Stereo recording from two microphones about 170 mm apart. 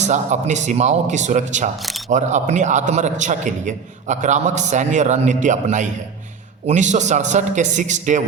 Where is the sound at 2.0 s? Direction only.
45° right (ahead or behind).